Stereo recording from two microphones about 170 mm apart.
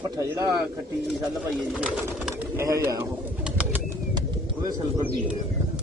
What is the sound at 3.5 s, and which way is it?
Bird, 5° right (ahead or behind).